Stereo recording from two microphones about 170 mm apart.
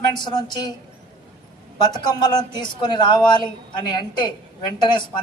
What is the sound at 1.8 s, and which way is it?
A man's voice, 25° left (ahead or behind).